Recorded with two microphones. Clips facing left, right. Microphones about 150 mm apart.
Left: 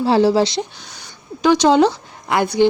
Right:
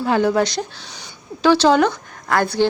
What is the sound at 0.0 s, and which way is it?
Speech, 30° left (ahead or behind).